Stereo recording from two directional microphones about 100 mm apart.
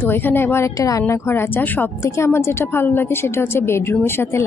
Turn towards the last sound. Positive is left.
turn(degrees=25)  # may be behind; listen again after turning